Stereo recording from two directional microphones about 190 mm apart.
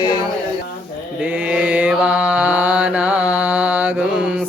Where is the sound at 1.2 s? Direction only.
5° right (ahead or behind).